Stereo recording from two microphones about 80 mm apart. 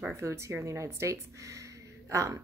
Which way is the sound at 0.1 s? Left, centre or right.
Right.